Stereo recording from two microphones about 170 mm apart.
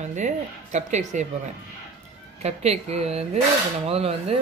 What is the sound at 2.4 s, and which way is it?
Speech, 40° right (ahead or behind).